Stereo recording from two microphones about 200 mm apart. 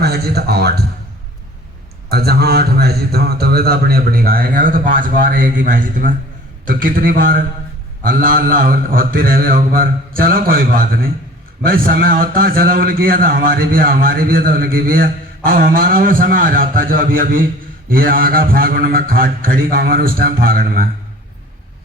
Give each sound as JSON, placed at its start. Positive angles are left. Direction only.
{"t": 0.0, "sound": "a man's voice", "side_deg": -50}
{"t": 2.0, "sound": "a man's voice", "side_deg": -50}